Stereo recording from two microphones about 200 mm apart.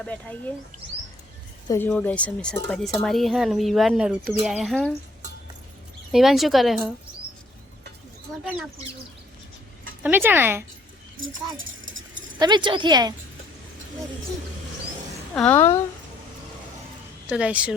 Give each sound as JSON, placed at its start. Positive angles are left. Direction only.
{"t": 0.0, "sound": "speech", "side_deg": 5}
{"t": 1.6, "sound": "a woman's voice", "side_deg": 15}
{"t": 6.1, "sound": "speech", "side_deg": 0}
{"t": 10.0, "sound": "speech", "side_deg": -10}
{"t": 12.4, "sound": "a woman's voice", "side_deg": -20}
{"t": 15.4, "sound": "speech", "side_deg": 10}
{"t": 17.2, "sound": "speech", "side_deg": -5}